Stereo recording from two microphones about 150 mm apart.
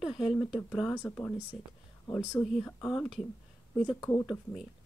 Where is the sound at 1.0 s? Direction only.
10° left (ahead or behind).